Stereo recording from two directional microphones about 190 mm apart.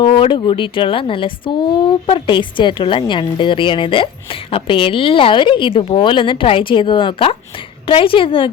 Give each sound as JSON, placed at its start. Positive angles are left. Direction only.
{"t": 0.0, "sound": "speech", "side_deg": 25}